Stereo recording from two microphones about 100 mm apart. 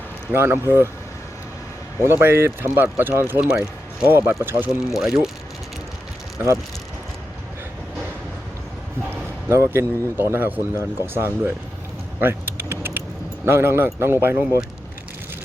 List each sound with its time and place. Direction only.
0.3 s speech: 25° right (ahead or behind)
2.0 s speech: 25° right (ahead or behind)
4.9 s speech: 5° right (ahead or behind)
9.0 s speech: 25° right (ahead or behind)
12.2 s typing: 20° right (ahead or behind)
13.4 s speech: 25° right (ahead or behind)